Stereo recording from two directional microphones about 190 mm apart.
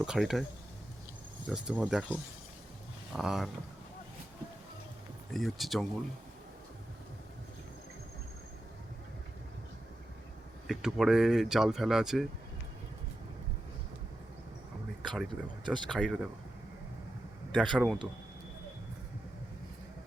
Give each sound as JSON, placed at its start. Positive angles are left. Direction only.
{"t": 0.0, "sound": "speech", "side_deg": -5}
{"t": 1.5, "sound": "speech", "side_deg": -5}
{"t": 5.3, "sound": "speech", "side_deg": 0}
{"t": 10.7, "sound": "speech", "side_deg": 0}
{"t": 15.0, "sound": "speech", "side_deg": 0}
{"t": 15.6, "sound": "speech", "side_deg": -25}
{"t": 15.9, "sound": "speech", "side_deg": 5}
{"t": 17.5, "sound": "speech", "side_deg": 5}